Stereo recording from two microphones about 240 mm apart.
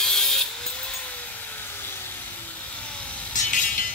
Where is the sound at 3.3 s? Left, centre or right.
Left.